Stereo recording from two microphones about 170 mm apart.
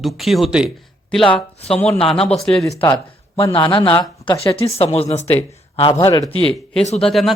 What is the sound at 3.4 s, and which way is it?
A man's voice, 30° left (ahead or behind).